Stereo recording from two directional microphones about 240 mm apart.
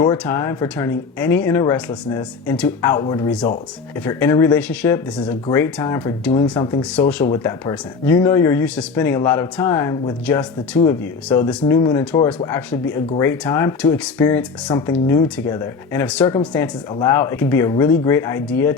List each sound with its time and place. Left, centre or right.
0.0 s speech: centre